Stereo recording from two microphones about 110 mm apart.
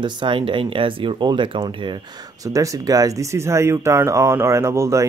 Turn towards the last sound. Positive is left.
turn(degrees=-25)  # may be behind; listen again after turning